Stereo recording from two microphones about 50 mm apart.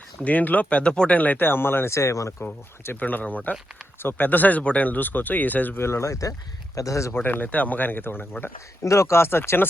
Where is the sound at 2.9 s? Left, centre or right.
Left.